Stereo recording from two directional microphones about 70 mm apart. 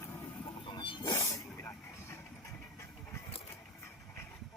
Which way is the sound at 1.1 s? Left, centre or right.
Left.